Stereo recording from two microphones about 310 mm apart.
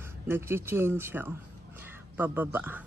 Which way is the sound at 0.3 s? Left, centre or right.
Centre.